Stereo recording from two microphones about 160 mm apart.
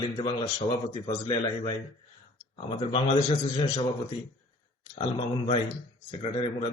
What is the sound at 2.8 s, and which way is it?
Speech, 40° left (ahead or behind).